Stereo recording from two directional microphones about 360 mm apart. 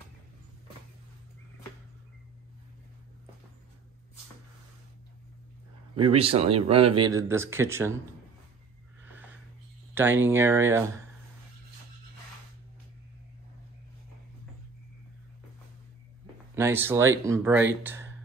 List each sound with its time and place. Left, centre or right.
5.9 s speech: centre
9.9 s speech: centre
16.5 s speech: centre